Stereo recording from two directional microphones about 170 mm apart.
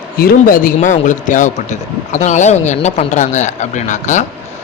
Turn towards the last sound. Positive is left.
turn(degrees=45)  # may be behind; listen again after turning